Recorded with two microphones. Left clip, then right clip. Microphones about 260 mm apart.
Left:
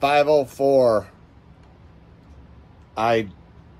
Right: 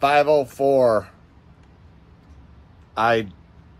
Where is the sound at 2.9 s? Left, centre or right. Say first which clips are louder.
Right 1 dB; centre.